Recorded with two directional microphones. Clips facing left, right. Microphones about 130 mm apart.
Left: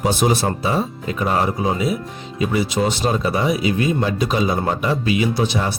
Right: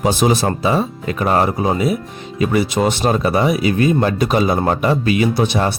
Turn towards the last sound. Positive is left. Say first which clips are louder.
# right 3 dB
turn(degrees=-60)  # may be behind; listen again after turning